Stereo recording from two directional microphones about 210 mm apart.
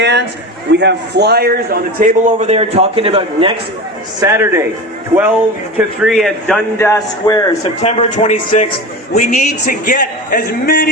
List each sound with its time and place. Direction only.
0.0 s a man's voice: 55° right (ahead or behind); by 3.5 s 25° right (ahead or behind)
4.2 s a man's voice: 15° right (ahead or behind)
5.7 s speech: 5° right (ahead or behind)
6.7 s speech: 10° left (ahead or behind)
7.8 s a man's voice: 30° left (ahead or behind)